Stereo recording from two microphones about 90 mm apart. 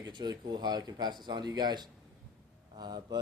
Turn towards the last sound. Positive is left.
turn(degrees=-50)  # may be behind; listen again after turning